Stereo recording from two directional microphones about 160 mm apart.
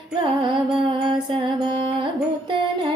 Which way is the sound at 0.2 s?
30° right (ahead or behind).